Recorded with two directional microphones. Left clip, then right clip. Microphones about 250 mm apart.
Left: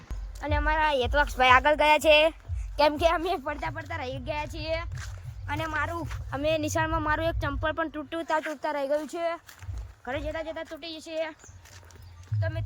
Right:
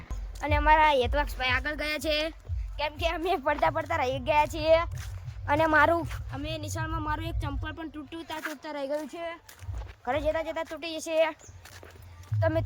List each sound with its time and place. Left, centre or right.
0.3 s speech: centre
1.5 s speech: centre
3.2 s speech: centre; by 6.0 s right
6.3 s speech: centre
10.0 s speech: centre